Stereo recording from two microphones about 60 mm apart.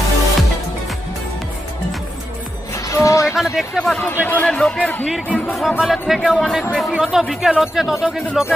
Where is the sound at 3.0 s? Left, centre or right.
Left.